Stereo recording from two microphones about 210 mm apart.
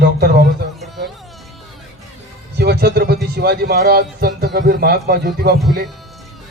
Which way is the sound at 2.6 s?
50° right (ahead or behind).